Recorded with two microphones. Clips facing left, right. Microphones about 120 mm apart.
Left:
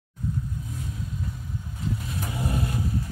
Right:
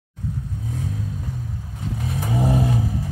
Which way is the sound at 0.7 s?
90° right.